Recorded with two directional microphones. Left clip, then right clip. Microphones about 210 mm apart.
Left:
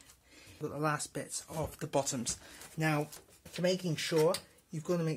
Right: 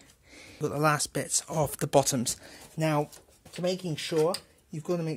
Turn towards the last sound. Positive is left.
turn(degrees=-30)  # may be behind; listen again after turning